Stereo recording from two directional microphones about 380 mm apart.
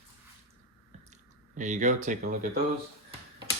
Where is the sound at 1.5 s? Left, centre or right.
Centre.